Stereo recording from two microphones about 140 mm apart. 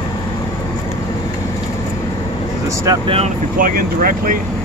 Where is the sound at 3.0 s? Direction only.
45° right (ahead or behind).